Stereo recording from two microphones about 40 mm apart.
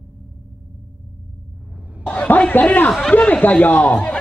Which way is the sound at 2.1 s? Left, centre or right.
Left.